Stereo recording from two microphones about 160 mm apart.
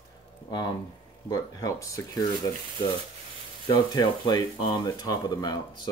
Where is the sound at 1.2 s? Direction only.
20° left (ahead or behind).